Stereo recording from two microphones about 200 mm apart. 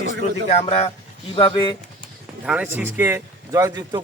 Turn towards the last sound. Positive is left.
turn(degrees=-20)  # may be behind; listen again after turning